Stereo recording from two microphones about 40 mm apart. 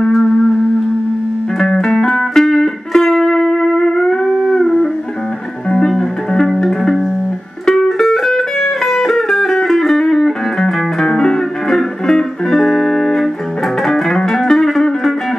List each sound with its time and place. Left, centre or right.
1.6 s music: centre